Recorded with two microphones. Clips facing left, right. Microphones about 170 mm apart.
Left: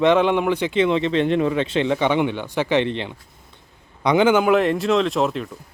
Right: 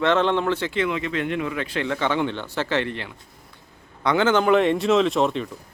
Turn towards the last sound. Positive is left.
turn(degrees=0)  # may be behind; listen again after turning